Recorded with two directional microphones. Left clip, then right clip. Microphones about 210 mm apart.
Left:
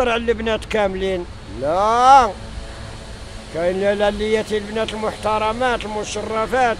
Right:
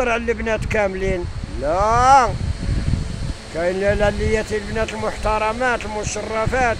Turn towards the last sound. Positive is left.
turn(degrees=10)  # may be behind; listen again after turning